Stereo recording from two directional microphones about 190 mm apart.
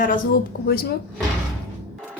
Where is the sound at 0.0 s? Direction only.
50° left (ahead or behind).